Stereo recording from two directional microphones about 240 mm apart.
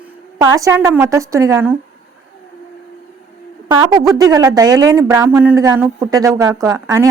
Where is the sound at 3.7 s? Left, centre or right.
Centre.